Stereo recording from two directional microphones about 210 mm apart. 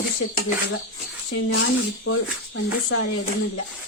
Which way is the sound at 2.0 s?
70° left (ahead or behind).